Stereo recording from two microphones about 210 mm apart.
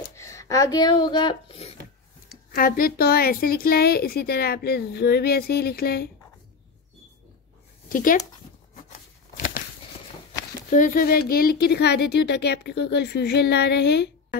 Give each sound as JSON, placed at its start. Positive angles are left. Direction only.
{"t": 0.1, "sound": "speech", "side_deg": 15}
{"t": 2.5, "sound": "a woman's voice", "side_deg": 45}
{"t": 7.9, "sound": "speech", "side_deg": 40}
{"t": 8.7, "sound": "a sound", "side_deg": 40}
{"t": 10.7, "sound": "a woman's voice", "side_deg": 40}